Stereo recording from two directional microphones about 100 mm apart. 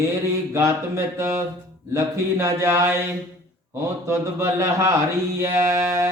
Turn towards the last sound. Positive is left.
turn(degrees=-30)  # may be behind; listen again after turning